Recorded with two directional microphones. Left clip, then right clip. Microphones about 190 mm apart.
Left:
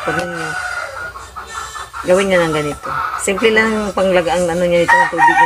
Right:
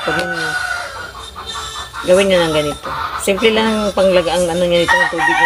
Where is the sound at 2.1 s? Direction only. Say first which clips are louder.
Right 1 dB; 25° left (ahead or behind).